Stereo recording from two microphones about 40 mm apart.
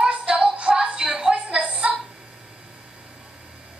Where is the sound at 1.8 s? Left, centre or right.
Centre.